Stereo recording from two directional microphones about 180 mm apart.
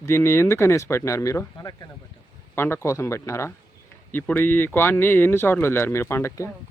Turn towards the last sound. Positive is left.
turn(degrees=15)  # may be behind; listen again after turning